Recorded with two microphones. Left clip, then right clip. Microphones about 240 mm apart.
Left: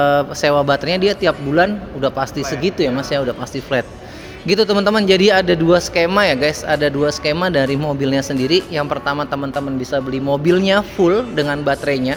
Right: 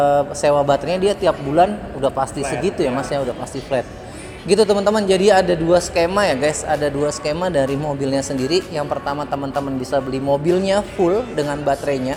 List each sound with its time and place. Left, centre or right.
0.0 s a man's voice: left
4.4 s a man's voice: left